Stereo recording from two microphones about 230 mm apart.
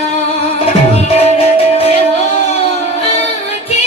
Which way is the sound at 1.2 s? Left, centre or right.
Left.